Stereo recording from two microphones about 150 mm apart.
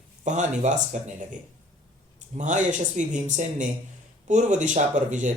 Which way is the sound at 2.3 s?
55° right (ahead or behind).